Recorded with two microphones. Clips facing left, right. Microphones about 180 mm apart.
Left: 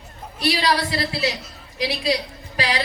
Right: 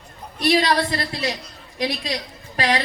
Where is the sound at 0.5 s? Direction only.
55° right (ahead or behind).